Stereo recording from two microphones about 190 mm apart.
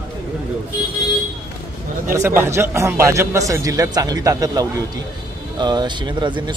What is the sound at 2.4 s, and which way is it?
A man's voice, 15° right (ahead or behind).